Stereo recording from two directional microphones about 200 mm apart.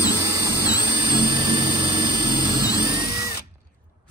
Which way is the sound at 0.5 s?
20° left (ahead or behind).